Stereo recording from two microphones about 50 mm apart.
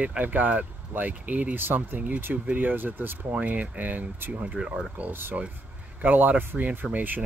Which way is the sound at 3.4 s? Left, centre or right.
Right.